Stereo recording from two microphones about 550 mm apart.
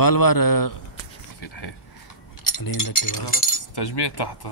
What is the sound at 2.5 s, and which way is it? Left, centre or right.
Speech, left.